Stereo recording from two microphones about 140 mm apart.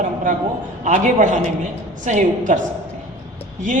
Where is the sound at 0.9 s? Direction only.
65° right (ahead or behind).